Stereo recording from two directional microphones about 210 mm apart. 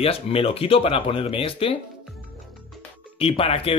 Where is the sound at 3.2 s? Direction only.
30° left (ahead or behind).